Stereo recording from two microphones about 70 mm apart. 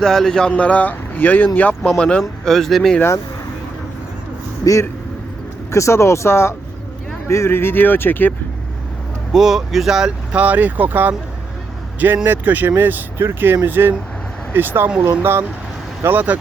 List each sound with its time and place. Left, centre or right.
0.0 s speech: centre
0.5 s speech: centre
4.6 s speech: left
9.3 s speech: centre
10.4 s speech: right